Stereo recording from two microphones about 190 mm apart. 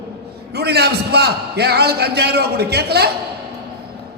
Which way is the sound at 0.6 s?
60° right (ahead or behind).